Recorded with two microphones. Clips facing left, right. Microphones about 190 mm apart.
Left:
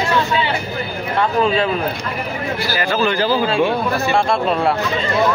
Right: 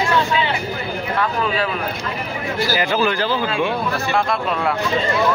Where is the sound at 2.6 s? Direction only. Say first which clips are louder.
Right 2 dB; 20° right (ahead or behind).